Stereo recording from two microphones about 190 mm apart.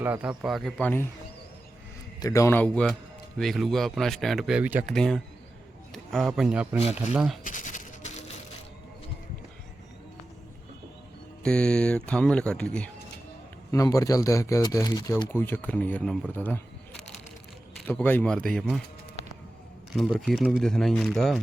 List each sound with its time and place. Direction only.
0.0 s speech: 10° right (ahead or behind); by 1.0 s 10° left (ahead or behind)
2.2 s speech: 15° left (ahead or behind); by 4.9 s 10° right (ahead or behind)
4.9 s speech: 5° left (ahead or behind)
7.4 s a sound: 40° left (ahead or behind)
11.4 s speech: 5° left (ahead or behind)
13.7 s speech: 15° left (ahead or behind)
17.7 s speech: 5° left (ahead or behind)
19.9 s speech: centre (ahead or behind)